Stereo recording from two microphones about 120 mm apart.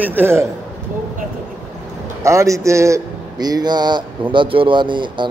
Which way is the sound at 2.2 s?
25° right (ahead or behind).